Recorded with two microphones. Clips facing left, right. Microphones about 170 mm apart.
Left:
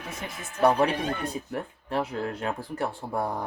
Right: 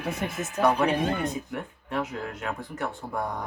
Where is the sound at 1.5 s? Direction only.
35° left (ahead or behind).